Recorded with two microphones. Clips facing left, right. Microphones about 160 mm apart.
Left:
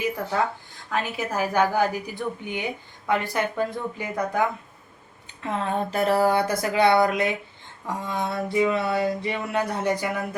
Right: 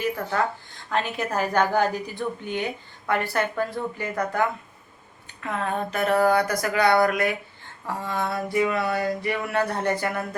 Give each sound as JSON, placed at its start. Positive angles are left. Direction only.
{"t": 0.0, "sound": "a woman's voice", "side_deg": 15}
{"t": 5.4, "sound": "a woman's voice", "side_deg": 25}